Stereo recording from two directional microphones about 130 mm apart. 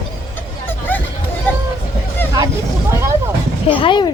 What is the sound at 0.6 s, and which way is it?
Vehicle, 15° left (ahead or behind).